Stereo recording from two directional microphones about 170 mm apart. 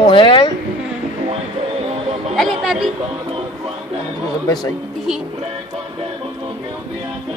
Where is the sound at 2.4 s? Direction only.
Centre (ahead or behind).